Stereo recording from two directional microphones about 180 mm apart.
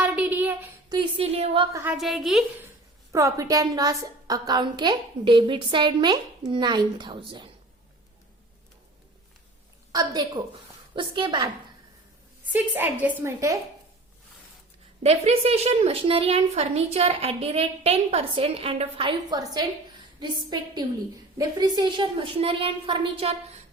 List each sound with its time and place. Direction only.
0.0 s a sound: 10° right (ahead or behind)
0.9 s a woman's voice: 30° right (ahead or behind)
1.7 s a woman's voice: 10° right (ahead or behind)
2.0 s a woman's voice: centre (ahead or behind)
3.1 s a woman's voice: 15° right (ahead or behind)
9.9 s a woman's voice: 20° right (ahead or behind)
12.5 s a woman's voice: 10° right (ahead or behind)
15.0 s a woman's voice: 35° right (ahead or behind)